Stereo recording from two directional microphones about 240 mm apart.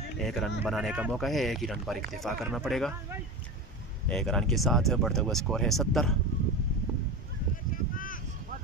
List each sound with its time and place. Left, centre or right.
0.2 s speech: centre
4.1 s speech: centre
7.9 s a sound: left